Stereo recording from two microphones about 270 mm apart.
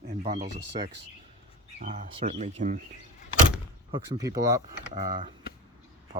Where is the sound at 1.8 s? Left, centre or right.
Right.